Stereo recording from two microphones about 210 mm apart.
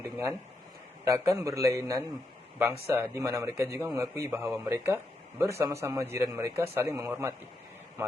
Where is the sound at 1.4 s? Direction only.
15° right (ahead or behind).